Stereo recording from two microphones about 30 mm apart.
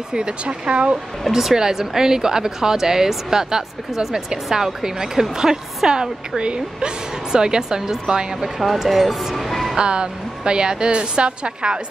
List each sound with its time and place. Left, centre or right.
0.1 s a woman's voice: right
1.3 s speech: centre
8.8 s speech: centre
9.3 s music: centre
9.8 s a woman's voice: right